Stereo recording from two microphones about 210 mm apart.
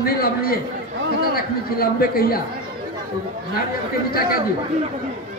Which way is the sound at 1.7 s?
45° left (ahead or behind).